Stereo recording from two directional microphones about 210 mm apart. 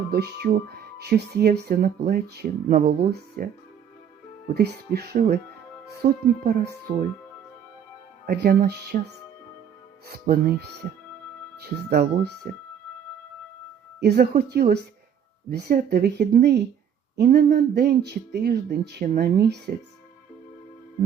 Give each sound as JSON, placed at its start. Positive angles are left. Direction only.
{"t": 0.1, "sound": "speech", "side_deg": -50}
{"t": 4.5, "sound": "speech", "side_deg": -50}
{"t": 8.3, "sound": "speech", "side_deg": -45}
{"t": 10.1, "sound": "speech", "side_deg": -50}
{"t": 14.0, "sound": "speech", "side_deg": -50}